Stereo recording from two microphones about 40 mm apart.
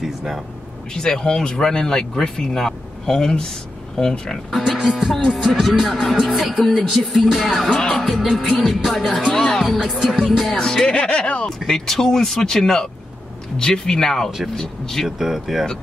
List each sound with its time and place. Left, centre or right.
0.0 s a sound: centre
0.9 s speech: centre
4.5 s speech: centre
7.7 s music: centre
8.0 s speech: centre
9.8 s music: centre
10.5 s speech: centre
11.1 s music: left
11.4 s speech: centre
15.0 s speech: centre